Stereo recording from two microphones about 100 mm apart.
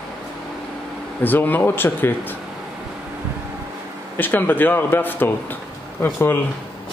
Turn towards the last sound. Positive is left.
turn(degrees=20)  # may be behind; listen again after turning